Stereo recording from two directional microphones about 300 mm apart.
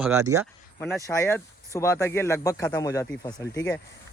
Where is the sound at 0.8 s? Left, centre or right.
Centre.